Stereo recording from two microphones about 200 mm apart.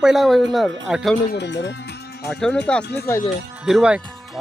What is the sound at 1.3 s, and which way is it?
Speech, 60° left (ahead or behind).